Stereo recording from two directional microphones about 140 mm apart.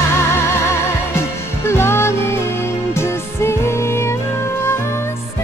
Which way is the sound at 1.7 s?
20° left (ahead or behind).